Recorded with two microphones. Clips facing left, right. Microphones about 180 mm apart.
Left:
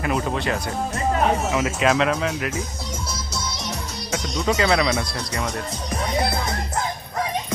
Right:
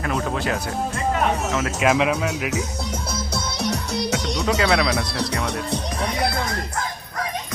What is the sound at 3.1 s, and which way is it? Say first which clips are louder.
Music: right 3 dB; 60° right (ahead or behind).